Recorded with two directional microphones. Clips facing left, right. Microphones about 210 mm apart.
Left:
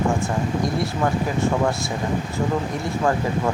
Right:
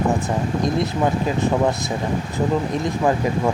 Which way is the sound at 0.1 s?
20° right (ahead or behind).